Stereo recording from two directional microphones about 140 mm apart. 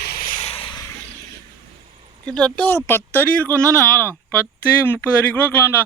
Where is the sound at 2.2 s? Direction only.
10° left (ahead or behind).